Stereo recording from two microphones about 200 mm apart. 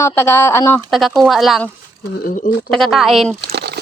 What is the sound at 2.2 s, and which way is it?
Speech, 40° left (ahead or behind).